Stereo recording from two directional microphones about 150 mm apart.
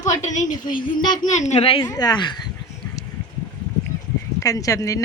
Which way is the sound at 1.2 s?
55° left (ahead or behind).